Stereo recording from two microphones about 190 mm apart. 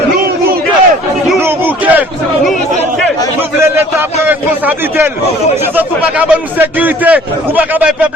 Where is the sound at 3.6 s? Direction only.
15° right (ahead or behind).